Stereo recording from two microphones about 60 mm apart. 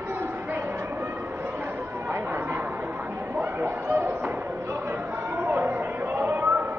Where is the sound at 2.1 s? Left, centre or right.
Right.